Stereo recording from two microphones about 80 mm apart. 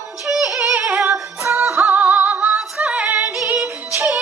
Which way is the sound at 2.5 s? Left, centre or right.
Centre.